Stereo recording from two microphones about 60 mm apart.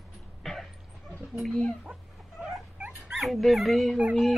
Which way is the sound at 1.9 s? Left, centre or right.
Centre.